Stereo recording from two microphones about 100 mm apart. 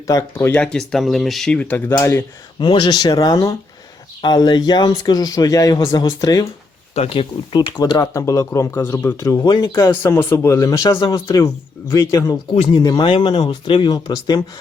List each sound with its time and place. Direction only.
0.1 s speech: 30° left (ahead or behind)
0.5 s speech: 5° left (ahead or behind)
1.5 s speech: 15° left (ahead or behind)
2.6 s speech: 50° left (ahead or behind); by 3.5 s 35° left (ahead or behind)
4.2 s speech: 45° left (ahead or behind)
6.9 s speech: 80° left; by 7.7 s 60° left (ahead or behind)
7.9 s speech: 35° left (ahead or behind)
9.5 s speech: 45° left (ahead or behind)
9.7 s speech: 25° left (ahead or behind); by 13.1 s 45° left (ahead or behind)
13.1 s speech: 55° left (ahead or behind)